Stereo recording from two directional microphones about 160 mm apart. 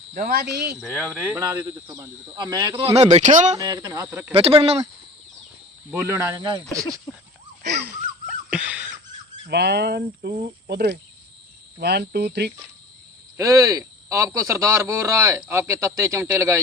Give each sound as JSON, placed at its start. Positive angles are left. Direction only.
{"t": 0.1, "sound": "speech", "side_deg": -60}
{"t": 0.5, "sound": "speech", "side_deg": -90}
{"t": 0.8, "sound": "speech", "side_deg": 0}
{"t": 2.3, "sound": "a man's voice", "side_deg": -25}
{"t": 3.0, "sound": "speech", "side_deg": -45}
{"t": 3.5, "sound": "a man's voice", "side_deg": -25}
{"t": 4.0, "sound": "speech", "side_deg": -10}
{"t": 4.4, "sound": "speech", "side_deg": -35}
{"t": 5.9, "sound": "a man's voice", "side_deg": -15}
{"t": 7.6, "sound": "wheeze", "side_deg": -90}
{"t": 8.3, "sound": "a sound", "side_deg": -5}
{"t": 9.5, "sound": "speech", "side_deg": -90}
{"t": 13.3, "sound": "a man's voice", "side_deg": -20}